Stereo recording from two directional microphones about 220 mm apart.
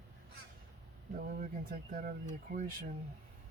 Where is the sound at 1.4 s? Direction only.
40° right (ahead or behind).